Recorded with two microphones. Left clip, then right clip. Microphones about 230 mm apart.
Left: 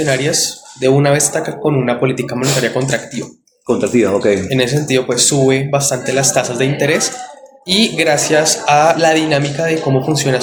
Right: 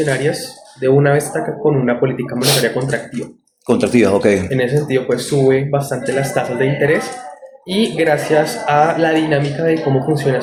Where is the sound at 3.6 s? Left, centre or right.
Right.